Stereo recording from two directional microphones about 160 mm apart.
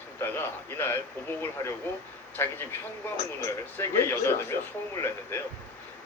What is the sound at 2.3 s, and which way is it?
A man's voice, 15° left (ahead or behind).